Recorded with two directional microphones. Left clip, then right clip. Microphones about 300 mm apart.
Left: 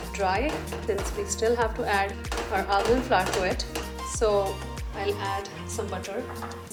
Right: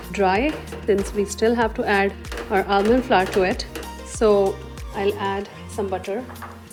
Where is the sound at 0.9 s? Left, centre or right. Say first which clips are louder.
Right 9 dB; right.